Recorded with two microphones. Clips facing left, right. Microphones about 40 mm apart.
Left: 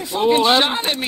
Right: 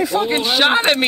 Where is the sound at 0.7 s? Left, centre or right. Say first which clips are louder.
Right 7 dB; right.